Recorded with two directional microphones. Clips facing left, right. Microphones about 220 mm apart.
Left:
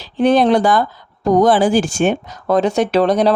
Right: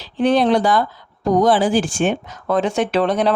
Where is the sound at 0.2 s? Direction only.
45° left (ahead or behind).